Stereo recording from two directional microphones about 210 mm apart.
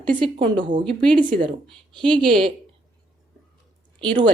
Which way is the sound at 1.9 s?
25° right (ahead or behind).